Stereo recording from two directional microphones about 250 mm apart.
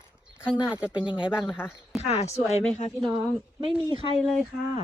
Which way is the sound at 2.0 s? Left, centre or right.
Left.